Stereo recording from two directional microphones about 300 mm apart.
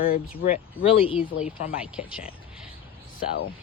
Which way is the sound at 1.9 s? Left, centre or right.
Centre.